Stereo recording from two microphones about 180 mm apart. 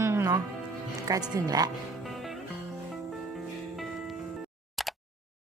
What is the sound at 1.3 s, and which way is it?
Speech, 20° right (ahead or behind).